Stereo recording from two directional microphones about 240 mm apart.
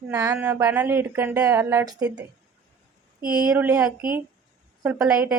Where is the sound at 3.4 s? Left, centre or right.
Centre.